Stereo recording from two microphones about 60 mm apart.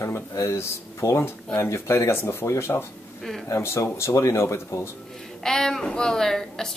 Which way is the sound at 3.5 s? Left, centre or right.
Left.